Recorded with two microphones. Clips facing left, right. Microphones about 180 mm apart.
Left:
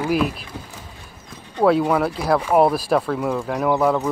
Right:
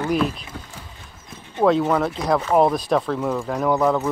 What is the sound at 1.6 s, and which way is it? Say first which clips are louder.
Speech: left 1 dB; 5° left (ahead or behind).